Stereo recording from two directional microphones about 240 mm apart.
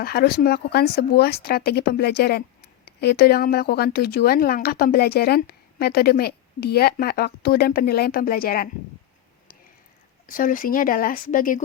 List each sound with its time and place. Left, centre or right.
0.0 s speech: left
10.2 s speech: left